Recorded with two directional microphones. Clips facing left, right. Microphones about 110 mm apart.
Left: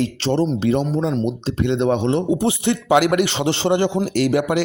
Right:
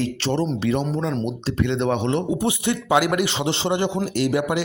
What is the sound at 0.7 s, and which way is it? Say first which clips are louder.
Speech: left 3 dB; 35° left (ahead or behind).